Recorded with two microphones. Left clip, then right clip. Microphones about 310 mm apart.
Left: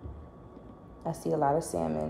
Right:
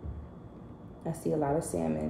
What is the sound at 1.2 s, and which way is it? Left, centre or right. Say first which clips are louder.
Speech: left 3 dB; centre.